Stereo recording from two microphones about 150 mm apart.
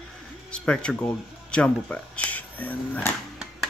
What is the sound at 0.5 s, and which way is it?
Speech, 5° left (ahead or behind).